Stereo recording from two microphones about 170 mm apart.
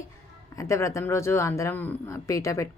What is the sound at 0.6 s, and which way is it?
Speech, 15° left (ahead or behind).